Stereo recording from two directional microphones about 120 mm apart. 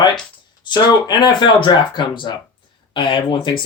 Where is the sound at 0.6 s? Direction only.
35° left (ahead or behind).